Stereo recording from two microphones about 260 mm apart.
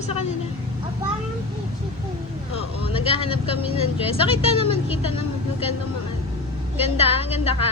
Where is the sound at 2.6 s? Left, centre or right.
Left.